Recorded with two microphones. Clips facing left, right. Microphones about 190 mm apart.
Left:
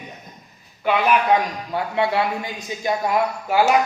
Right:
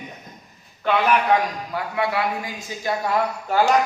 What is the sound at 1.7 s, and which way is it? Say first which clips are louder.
A man's voice: left 4 dB; 25° left (ahead or behind).